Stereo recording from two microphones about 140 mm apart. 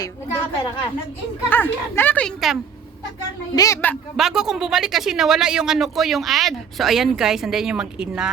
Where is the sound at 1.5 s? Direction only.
15° left (ahead or behind).